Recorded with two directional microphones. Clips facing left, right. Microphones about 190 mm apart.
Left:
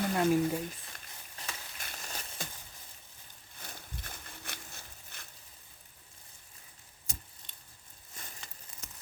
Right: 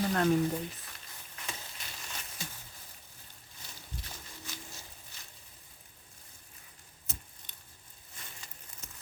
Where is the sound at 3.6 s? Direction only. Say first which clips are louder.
Left 1 dB; 55° left (ahead or behind).